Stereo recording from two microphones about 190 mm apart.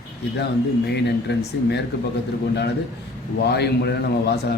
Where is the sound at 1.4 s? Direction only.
60° left (ahead or behind).